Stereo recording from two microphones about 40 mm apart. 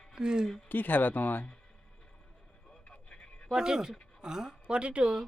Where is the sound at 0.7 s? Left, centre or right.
Left.